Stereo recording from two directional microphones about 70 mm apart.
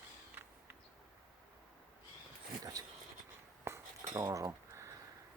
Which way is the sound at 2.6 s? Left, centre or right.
Right.